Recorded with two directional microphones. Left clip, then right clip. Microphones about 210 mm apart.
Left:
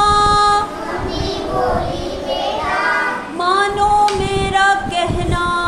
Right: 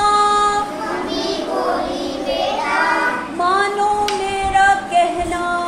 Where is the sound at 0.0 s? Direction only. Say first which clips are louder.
Left 2 dB; 10° left (ahead or behind).